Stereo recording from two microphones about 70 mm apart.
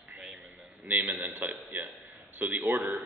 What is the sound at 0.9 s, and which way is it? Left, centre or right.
A man's voice, right.